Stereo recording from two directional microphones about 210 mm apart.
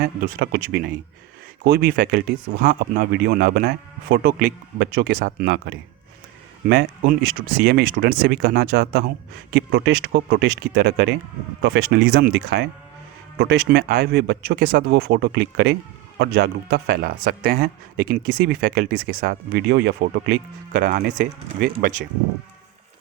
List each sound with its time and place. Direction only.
0.0 s speech: 50° right (ahead or behind)